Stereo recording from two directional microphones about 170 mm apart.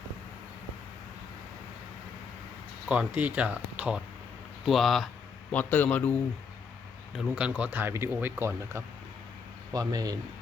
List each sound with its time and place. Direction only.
2.9 s a man's voice: 10° right (ahead or behind); by 6.1 s 10° left (ahead or behind)
7.2 s speech: 5° right (ahead or behind); by 10.2 s 20° right (ahead or behind)